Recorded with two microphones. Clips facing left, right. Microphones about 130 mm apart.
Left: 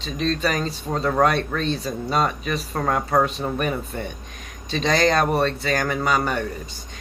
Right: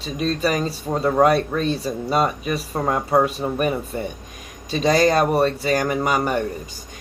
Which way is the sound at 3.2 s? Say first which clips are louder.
Right 2 dB; 10° right (ahead or behind).